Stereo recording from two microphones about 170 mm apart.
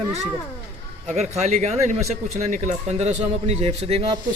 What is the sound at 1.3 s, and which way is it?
Speech, 40° right (ahead or behind).